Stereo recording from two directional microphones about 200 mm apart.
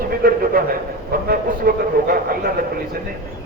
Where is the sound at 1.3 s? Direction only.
45° right (ahead or behind).